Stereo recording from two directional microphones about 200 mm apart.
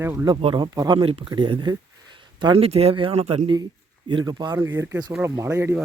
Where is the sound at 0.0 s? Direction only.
10° right (ahead or behind).